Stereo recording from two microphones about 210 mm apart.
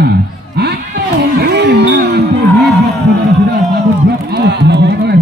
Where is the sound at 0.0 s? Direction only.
50° right (ahead or behind).